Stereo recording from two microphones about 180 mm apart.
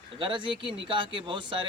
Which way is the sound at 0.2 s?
25° right (ahead or behind).